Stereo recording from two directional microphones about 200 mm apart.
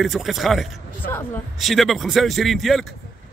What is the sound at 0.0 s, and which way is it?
Speech, centre (ahead or behind).